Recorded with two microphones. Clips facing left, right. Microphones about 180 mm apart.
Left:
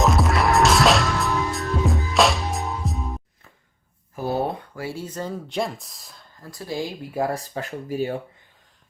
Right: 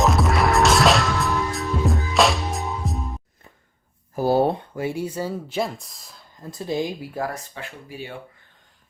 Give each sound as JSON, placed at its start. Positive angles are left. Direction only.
{"t": 0.0, "sound": "music", "side_deg": 0}
{"t": 4.1, "sound": "speech", "side_deg": -35}
{"t": 6.4, "sound": "speech", "side_deg": -20}
{"t": 7.3, "sound": "speech", "side_deg": 35}